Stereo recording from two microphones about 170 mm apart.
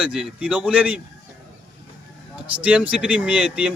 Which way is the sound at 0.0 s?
5° right (ahead or behind).